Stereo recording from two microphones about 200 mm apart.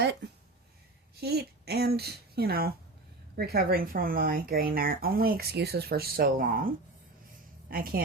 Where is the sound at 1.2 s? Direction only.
55° right (ahead or behind).